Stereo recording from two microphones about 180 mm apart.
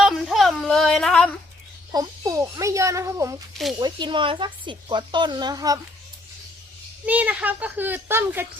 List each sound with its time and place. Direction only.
0.0 s a sound: centre (ahead or behind)
1.9 s a woman's voice: 20° right (ahead or behind)
7.0 s speech: 10° right (ahead or behind)